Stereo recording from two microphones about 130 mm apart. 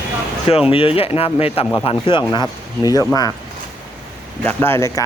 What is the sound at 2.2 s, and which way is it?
Speech, 30° left (ahead or behind).